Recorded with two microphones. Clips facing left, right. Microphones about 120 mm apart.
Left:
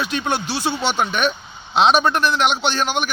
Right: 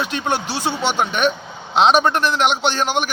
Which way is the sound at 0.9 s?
15° right (ahead or behind).